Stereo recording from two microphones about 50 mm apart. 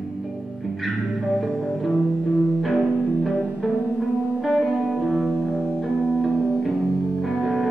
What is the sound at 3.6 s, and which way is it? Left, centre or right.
Music, centre.